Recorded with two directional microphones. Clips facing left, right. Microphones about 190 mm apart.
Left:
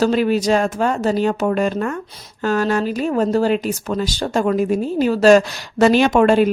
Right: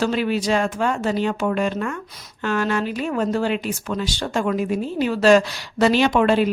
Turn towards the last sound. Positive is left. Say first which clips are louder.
# left 4 dB
turn(degrees=45)  # may be behind; listen again after turning